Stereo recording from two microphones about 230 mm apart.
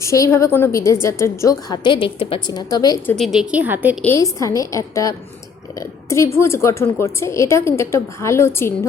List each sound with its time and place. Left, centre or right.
0.0 s a woman's voice: centre
3.2 s a woman's voice: centre
4.0 s a woman's voice: centre